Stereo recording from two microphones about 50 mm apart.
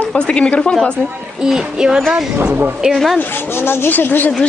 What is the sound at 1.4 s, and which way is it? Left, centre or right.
Music, centre.